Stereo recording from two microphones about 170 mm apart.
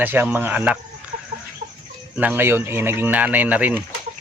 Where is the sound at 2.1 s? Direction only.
10° right (ahead or behind).